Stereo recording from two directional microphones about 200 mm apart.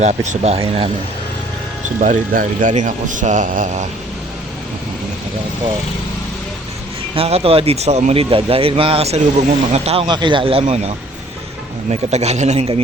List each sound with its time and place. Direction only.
0.0 s speech: 35° right (ahead or behind)
2.0 s speech: 40° right (ahead or behind)
7.2 s speech: 30° right (ahead or behind)